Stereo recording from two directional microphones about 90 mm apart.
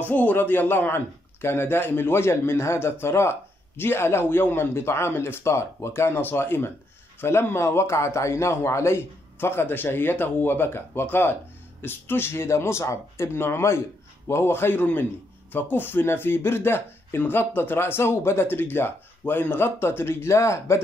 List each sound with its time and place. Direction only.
0.0 s a man's voice: 20° left (ahead or behind)